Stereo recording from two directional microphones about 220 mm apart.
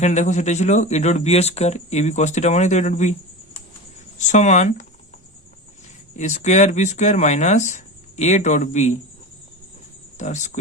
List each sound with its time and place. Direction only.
0.0 s speech: 30° left (ahead or behind)
4.2 s speech: 35° left (ahead or behind)
6.1 s speech: 35° left (ahead or behind)
10.2 s speech: 35° left (ahead or behind)